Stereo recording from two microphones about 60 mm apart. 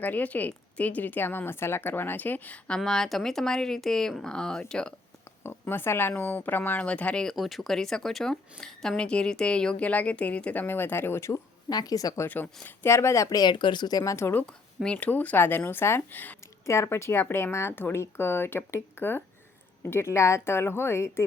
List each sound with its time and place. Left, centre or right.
0.0 s speech: left
2.6 s speech: centre
5.4 s speech: left
7.3 s speech: centre
9.0 s speech: centre; by 11.3 s left
11.7 s speech: left
12.6 s a woman's voice: left
13.9 s speech: left
14.9 s speech: left
16.6 s a woman's voice: left